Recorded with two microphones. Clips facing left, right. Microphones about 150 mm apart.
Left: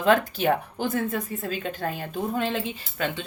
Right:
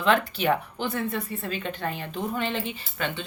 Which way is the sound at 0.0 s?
45° left (ahead or behind).